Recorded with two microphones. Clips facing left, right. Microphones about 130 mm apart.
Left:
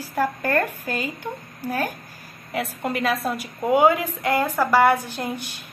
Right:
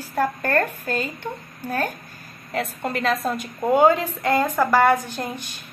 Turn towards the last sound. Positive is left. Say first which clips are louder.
# left 1 dB
turn(degrees=15)  # may be behind; listen again after turning